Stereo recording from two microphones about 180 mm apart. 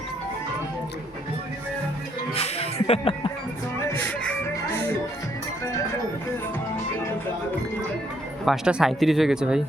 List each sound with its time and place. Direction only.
2.3 s music: 35° left (ahead or behind)
8.4 s speech: centre (ahead or behind)